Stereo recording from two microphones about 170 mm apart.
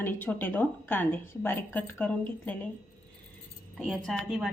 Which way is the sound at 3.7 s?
Centre (ahead or behind).